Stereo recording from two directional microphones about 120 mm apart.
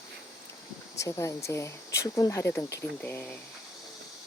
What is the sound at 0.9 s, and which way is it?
Speech, 25° left (ahead or behind).